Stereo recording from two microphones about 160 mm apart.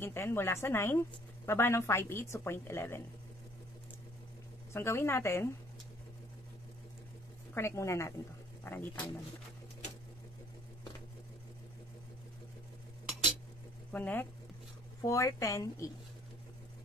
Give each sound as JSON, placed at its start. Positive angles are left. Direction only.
{"t": 0.0, "sound": "a woman's voice", "side_deg": 15}
{"t": 4.7, "sound": "a woman's voice", "side_deg": 15}
{"t": 7.5, "sound": "a woman's voice", "side_deg": 15}
{"t": 13.9, "sound": "a woman's voice", "side_deg": 10}